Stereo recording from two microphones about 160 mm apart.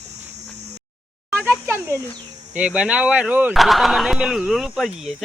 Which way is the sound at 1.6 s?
15° right (ahead or behind).